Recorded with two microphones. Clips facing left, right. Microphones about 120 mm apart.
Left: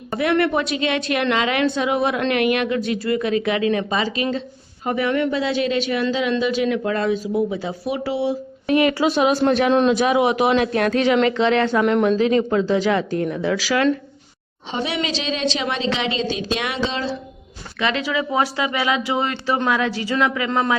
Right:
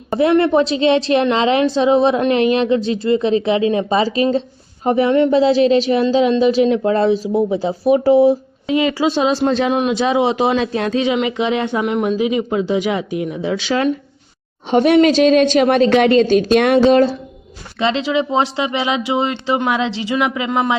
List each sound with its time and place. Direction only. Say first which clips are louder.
0.1 s a woman's voice: right 6 dB; 25° right (ahead or behind); by 8.4 s 40° right (ahead or behind)
8.6 s a woman's voice: right 1 dB; 20° right (ahead or behind)
11.8 s speech: even; 5° right (ahead or behind); by 13.9 s 25° right (ahead or behind)
14.7 s speech: right 13 dB; 50° right (ahead or behind)
17.7 s a woman's voice: right 5 dB; 25° right (ahead or behind)